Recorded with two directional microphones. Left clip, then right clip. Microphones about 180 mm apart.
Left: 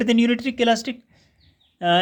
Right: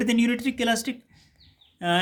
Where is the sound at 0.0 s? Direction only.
40° left (ahead or behind).